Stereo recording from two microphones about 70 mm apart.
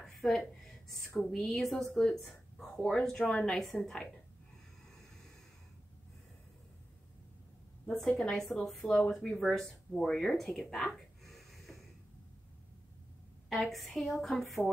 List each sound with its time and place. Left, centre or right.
0.0 s a sound: centre
0.9 s speech: centre
2.0 s a sound: centre
2.8 s speech: centre
3.5 s speech: centre
7.8 s a woman's voice: centre
8.8 s speech: centre
10.7 s a sound: centre
13.5 s speech: centre